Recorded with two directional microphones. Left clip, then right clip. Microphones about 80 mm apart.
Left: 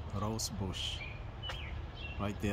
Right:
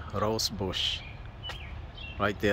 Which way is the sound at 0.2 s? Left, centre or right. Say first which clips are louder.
Right 10 dB; centre.